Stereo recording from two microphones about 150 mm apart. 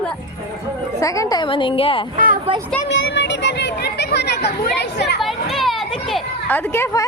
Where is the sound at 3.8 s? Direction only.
90° left.